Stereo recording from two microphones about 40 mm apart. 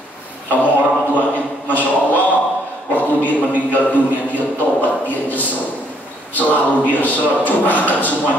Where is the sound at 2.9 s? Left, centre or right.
Left.